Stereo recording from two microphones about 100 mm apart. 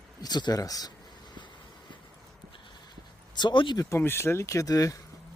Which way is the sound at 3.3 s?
50° left (ahead or behind).